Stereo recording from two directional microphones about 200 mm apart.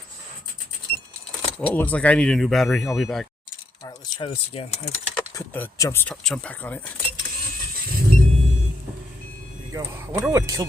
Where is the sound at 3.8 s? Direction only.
25° left (ahead or behind).